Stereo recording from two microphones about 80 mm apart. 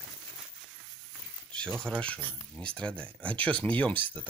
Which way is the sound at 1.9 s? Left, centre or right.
Centre.